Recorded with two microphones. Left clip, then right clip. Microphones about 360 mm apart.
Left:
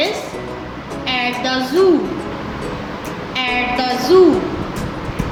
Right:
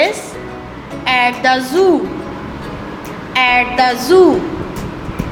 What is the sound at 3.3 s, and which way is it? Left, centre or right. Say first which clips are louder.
Music: right 7 dB; right.